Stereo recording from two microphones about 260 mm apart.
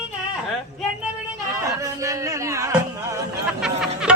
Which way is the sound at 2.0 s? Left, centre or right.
Centre.